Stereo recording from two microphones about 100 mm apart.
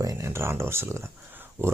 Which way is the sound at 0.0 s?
30° right (ahead or behind).